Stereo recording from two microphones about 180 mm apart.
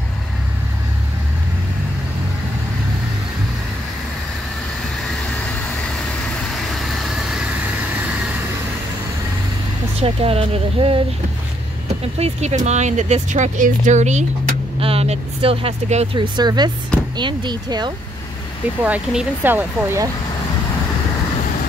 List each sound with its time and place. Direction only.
5.5 s vehicle: 5° left (ahead or behind)
9.9 s speech: 35° right (ahead or behind)
12.2 s speech: 40° right (ahead or behind)
18.9 s speech: 10° right (ahead or behind)